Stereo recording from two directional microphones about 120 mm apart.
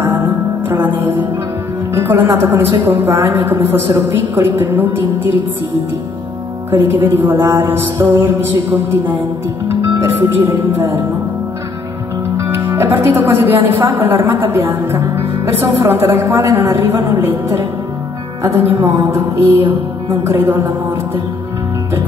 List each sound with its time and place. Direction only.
0.0 s music: 15° right (ahead or behind)
0.8 s a woman's voice: 15° right (ahead or behind)
6.7 s speech: 20° right (ahead or behind)
12.4 s a woman's voice: 20° right (ahead or behind)